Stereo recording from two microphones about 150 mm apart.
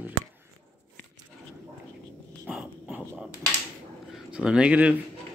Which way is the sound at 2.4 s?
5° right (ahead or behind).